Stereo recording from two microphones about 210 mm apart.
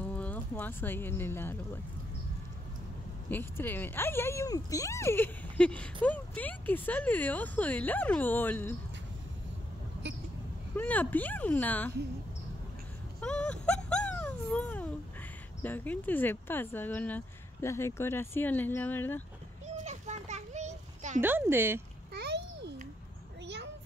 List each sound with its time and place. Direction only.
0.0 s speech: 5° left (ahead or behind)
3.3 s speech: 10° left (ahead or behind)
10.0 s vehicle: 55° right (ahead or behind)
10.8 s speech: 10° left (ahead or behind)
13.2 s a sound: 5° left (ahead or behind)
15.6 s speech: 10° left (ahead or behind)
19.6 s children playing: 35° right (ahead or behind)
21.2 s speech: 10° right (ahead or behind)
22.1 s babbling: 55° right (ahead or behind)
23.4 s a sound: 55° right (ahead or behind)